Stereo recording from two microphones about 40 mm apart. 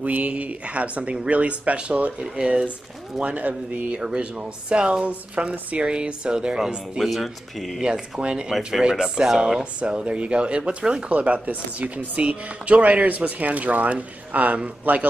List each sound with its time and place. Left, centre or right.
0.0 s speech: right
2.3 s speech: right
3.3 s speech: right
3.9 s speech: right
5.0 s speech: right
7.0 s speech: centre
7.8 s speech: right